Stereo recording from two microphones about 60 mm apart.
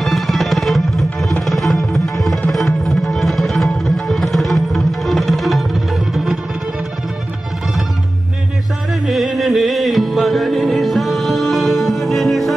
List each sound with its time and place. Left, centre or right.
0.0 s music: centre
9.0 s music: centre